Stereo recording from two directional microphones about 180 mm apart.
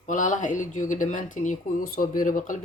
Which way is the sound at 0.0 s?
45° left (ahead or behind).